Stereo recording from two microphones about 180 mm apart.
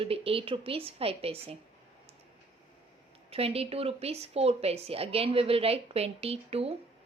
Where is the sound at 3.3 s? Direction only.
35° right (ahead or behind).